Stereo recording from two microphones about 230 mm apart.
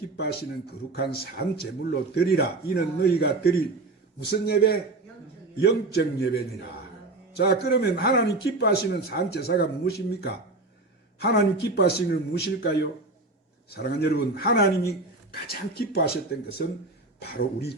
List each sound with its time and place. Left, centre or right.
0.9 s a man's voice: left
17.2 s a man's voice: left